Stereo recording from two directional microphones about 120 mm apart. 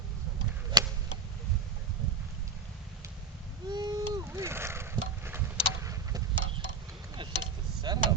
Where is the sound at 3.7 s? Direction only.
35° right (ahead or behind).